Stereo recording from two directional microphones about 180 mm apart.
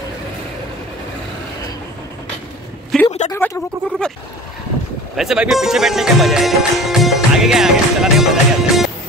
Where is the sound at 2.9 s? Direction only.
Centre (ahead or behind).